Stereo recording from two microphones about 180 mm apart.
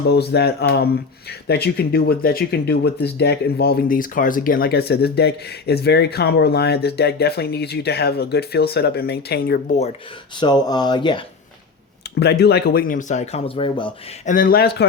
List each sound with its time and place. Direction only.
0.1 s speech: 65° left (ahead or behind)
10.3 s speech: 25° left (ahead or behind)
12.2 s a man's voice: 65° left (ahead or behind); by 13.9 s 30° left (ahead or behind)
14.3 s speech: 50° left (ahead or behind)